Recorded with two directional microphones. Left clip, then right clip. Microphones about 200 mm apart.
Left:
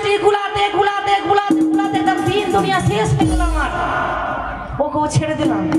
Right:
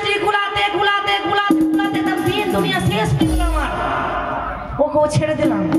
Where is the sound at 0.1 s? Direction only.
25° right (ahead or behind).